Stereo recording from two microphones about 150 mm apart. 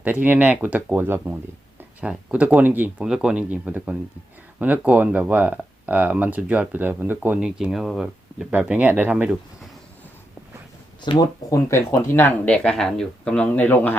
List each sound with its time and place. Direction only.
0.0 s speech: 10° right (ahead or behind)
11.0 s speech: 30° left (ahead or behind)
11.5 s speech: 15° left (ahead or behind)